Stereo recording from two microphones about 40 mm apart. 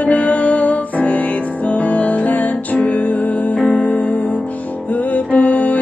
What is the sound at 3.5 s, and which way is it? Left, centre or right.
Music, left.